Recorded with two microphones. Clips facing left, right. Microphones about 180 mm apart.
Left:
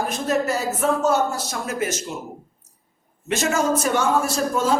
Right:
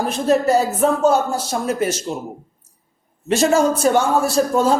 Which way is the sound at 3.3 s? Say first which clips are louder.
Right 5 dB; 35° right (ahead or behind).